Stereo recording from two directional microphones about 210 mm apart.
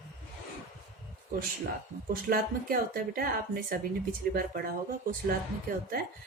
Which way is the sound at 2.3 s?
45° right (ahead or behind).